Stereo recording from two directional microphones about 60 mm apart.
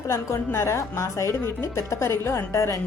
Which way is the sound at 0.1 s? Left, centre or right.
Left.